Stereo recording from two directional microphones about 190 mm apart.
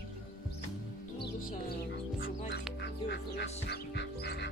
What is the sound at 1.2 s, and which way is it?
Music, 55° left (ahead or behind).